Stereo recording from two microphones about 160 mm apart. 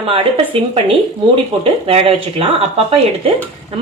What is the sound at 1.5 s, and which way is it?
A woman's voice, 35° right (ahead or behind).